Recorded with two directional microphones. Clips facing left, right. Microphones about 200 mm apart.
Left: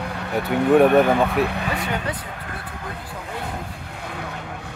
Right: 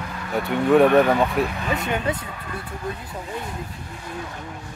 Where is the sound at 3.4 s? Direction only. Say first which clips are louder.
Left 2 dB; 60° left (ahead or behind).